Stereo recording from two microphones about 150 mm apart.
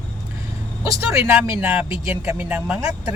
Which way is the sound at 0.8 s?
20° right (ahead or behind).